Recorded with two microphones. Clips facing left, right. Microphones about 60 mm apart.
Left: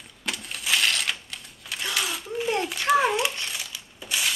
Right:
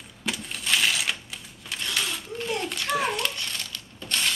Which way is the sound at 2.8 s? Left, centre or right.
Centre.